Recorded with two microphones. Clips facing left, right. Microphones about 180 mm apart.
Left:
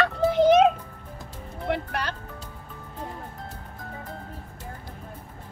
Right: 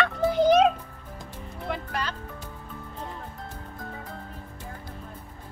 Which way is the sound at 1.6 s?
65° left (ahead or behind).